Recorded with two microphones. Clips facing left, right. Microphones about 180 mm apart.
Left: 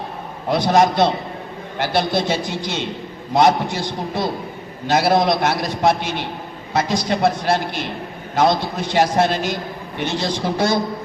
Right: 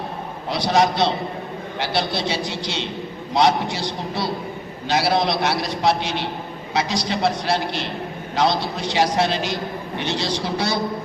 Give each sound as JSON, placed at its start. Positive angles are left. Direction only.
{"t": 0.5, "sound": "a man's voice", "side_deg": 50}